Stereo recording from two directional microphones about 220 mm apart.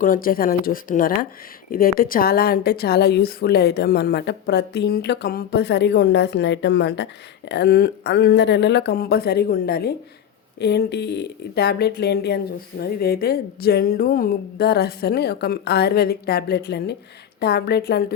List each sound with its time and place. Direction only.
0.0 s a woman's voice: 40° left (ahead or behind)